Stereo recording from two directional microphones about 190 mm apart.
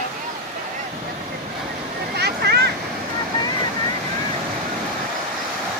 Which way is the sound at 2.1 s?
55° right (ahead or behind).